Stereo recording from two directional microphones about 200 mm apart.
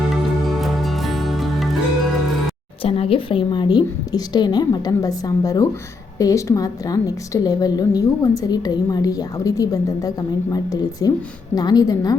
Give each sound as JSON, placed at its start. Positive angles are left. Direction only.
{"t": 0.1, "sound": "music", "side_deg": 0}
{"t": 2.8, "sound": "a woman's voice", "side_deg": 30}